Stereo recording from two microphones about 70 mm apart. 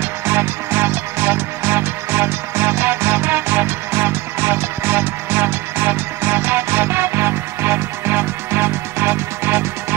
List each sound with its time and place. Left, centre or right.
0.3 s music: right